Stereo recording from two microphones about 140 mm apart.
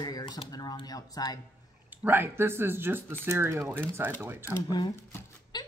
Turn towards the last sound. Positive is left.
turn(degrees=30)  # may be behind; listen again after turning